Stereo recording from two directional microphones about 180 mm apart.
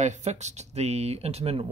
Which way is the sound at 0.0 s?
40° right (ahead or behind).